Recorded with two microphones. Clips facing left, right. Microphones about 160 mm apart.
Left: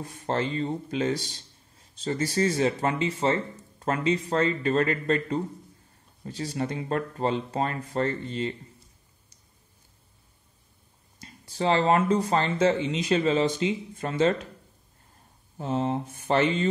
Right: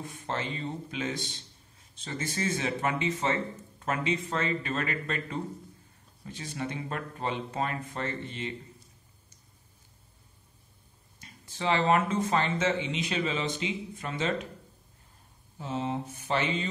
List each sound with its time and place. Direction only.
0.0 s speech: 40° left (ahead or behind)
11.1 s speech: 40° left (ahead or behind)
15.5 s speech: 45° left (ahead or behind)